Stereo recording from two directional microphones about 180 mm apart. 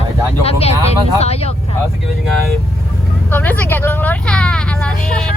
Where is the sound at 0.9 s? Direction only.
35° left (ahead or behind).